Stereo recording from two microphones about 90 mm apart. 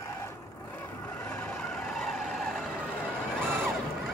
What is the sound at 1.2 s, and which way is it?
Vehicle, 15° left (ahead or behind).